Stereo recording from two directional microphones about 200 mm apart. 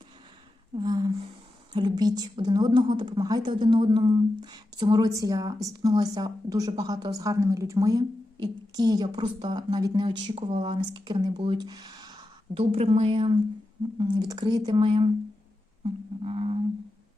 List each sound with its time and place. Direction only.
0.8 s a sound: 20° right (ahead or behind)
1.7 s a woman's voice: 20° right (ahead or behind)
15.8 s didgeridoo: 30° right (ahead or behind)